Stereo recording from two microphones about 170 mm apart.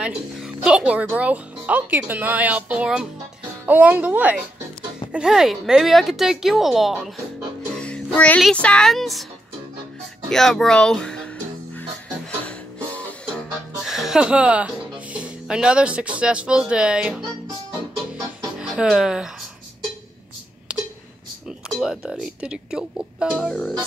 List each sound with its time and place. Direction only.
0.0 s speech: 5° right (ahead or behind)
10.3 s music: centre (ahead or behind)
13.8 s speech: centre (ahead or behind)
18.1 s music: 5° right (ahead or behind)
21.5 s speech: centre (ahead or behind)